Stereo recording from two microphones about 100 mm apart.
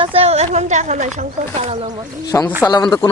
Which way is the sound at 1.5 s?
90° right.